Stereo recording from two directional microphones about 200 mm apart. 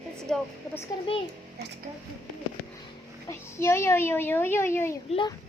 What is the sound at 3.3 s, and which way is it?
A child's voice, 15° left (ahead or behind).